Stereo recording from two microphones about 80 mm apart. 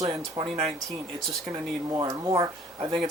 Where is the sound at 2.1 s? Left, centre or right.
Right.